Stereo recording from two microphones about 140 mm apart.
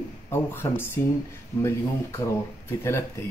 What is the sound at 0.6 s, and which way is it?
Speech, 15° left (ahead or behind).